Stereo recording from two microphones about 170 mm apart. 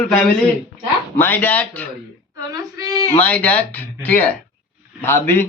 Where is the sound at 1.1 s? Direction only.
10° left (ahead or behind).